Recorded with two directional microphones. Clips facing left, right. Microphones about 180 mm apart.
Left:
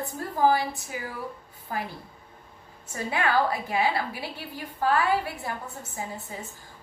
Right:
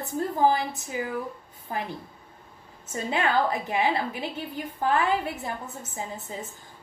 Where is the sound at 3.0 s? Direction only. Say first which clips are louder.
Even; 20° right (ahead or behind).